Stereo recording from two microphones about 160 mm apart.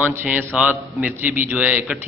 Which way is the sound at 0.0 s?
10° right (ahead or behind).